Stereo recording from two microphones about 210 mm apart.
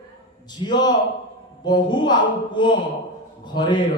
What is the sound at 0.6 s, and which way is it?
Speech, 20° left (ahead or behind).